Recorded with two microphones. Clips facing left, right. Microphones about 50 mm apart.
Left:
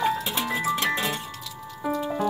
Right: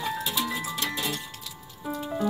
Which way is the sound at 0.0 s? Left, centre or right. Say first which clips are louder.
Left 4 dB; left.